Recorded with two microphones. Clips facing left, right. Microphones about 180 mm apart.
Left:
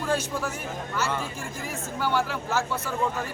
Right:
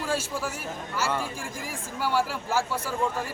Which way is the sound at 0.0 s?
5° right (ahead or behind).